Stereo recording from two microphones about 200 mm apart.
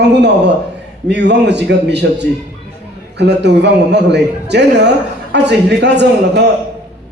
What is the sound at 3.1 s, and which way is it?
A man's voice, 60° right (ahead or behind).